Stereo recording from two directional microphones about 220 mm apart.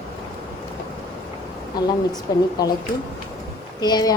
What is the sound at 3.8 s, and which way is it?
Speech, 20° left (ahead or behind).